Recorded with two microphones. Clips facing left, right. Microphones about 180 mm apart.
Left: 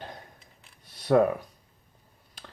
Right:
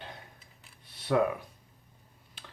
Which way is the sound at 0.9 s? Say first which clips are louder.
Left 5 dB; 45° left (ahead or behind).